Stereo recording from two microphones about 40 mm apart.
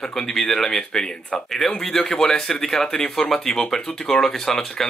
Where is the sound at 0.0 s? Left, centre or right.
Centre.